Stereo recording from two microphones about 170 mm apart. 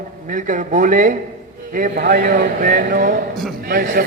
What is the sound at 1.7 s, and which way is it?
A man's voice, 65° right (ahead or behind).